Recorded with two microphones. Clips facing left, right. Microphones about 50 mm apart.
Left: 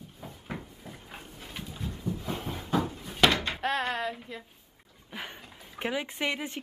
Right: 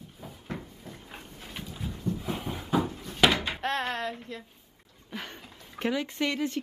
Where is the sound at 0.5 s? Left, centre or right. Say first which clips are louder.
Right 1 dB; centre.